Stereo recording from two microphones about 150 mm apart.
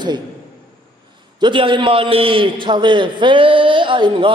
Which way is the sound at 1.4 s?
35° right (ahead or behind).